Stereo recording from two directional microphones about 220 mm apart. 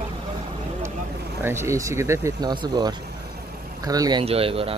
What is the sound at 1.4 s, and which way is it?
Speech, 10° right (ahead or behind).